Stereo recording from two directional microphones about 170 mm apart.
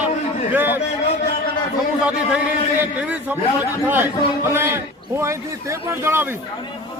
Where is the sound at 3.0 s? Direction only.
10° right (ahead or behind).